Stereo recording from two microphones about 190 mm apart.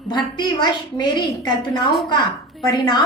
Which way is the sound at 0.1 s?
25° left (ahead or behind).